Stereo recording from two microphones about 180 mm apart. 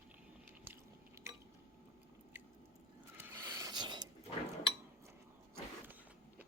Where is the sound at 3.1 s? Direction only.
10° right (ahead or behind).